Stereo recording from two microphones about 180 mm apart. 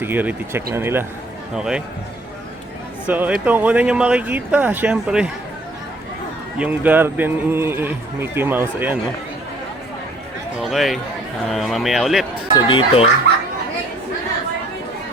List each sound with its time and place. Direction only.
0.0 s speech: 10° right (ahead or behind)
3.1 s speech: 10° right (ahead or behind)
6.6 s speech: 10° right (ahead or behind)
10.6 s speech: centre (ahead or behind)
12.5 s speech: 25° left (ahead or behind)